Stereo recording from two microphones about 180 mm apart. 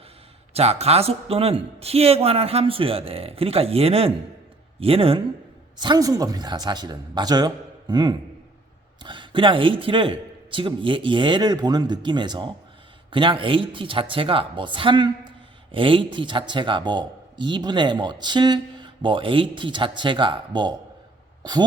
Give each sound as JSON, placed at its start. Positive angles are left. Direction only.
{"t": 0.5, "sound": "speech", "side_deg": -35}